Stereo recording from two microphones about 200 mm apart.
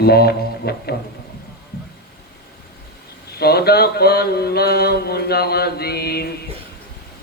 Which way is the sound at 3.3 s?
50° left (ahead or behind).